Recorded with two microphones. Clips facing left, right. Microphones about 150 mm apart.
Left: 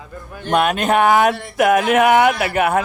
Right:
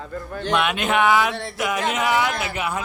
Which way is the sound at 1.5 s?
55° left (ahead or behind).